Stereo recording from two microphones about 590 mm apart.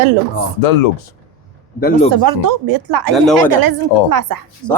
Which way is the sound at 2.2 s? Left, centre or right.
Right.